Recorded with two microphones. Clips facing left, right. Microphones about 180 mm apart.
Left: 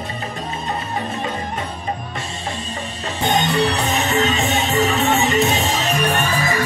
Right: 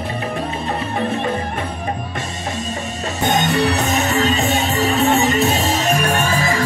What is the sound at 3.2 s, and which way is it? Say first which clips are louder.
Music: right 1 dB; 45° right (ahead or behind).